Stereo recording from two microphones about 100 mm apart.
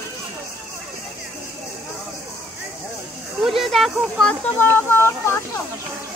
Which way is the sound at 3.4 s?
Centre (ahead or behind).